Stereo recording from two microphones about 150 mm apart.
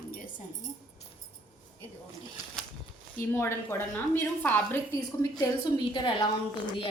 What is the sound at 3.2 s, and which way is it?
A woman's voice, 15° left (ahead or behind).